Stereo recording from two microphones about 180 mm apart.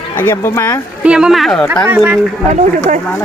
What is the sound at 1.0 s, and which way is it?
Speech, 5° right (ahead or behind).